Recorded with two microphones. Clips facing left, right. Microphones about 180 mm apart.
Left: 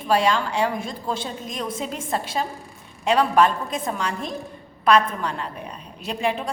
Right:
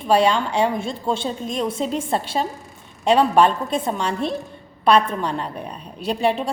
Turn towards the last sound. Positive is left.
turn(degrees=-30)  # may be behind; listen again after turning